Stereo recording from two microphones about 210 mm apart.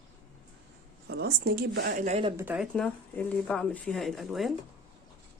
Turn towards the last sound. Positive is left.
turn(degrees=0)  # may be behind; listen again after turning